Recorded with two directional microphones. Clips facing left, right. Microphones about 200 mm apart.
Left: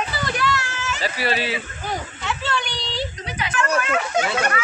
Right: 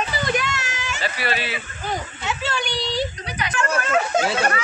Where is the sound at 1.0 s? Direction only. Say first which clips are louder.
Left 2 dB; 35° left (ahead or behind).